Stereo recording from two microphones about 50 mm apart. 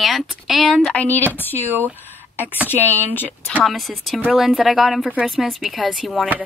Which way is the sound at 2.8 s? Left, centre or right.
Right.